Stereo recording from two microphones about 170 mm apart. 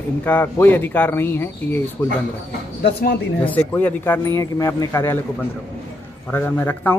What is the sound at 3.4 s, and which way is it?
Speech, 10° left (ahead or behind).